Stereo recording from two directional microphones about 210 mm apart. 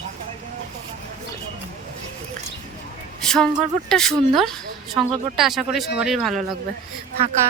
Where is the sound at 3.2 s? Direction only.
5° left (ahead or behind).